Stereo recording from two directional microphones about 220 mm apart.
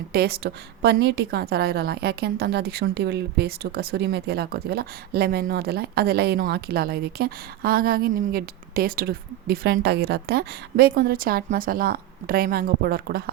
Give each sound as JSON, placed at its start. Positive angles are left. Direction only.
{"t": 0.1, "sound": "a woman's voice", "side_deg": -45}